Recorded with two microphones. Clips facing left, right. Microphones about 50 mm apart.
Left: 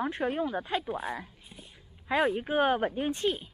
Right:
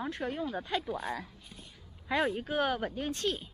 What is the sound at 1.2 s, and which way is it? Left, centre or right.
Whispering, left.